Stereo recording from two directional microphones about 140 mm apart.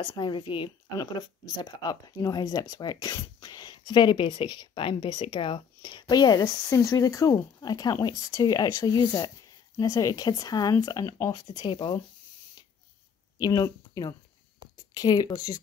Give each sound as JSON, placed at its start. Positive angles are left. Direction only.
{"t": 0.0, "sound": "speech", "side_deg": 35}
{"t": 13.4, "sound": "speech", "side_deg": 30}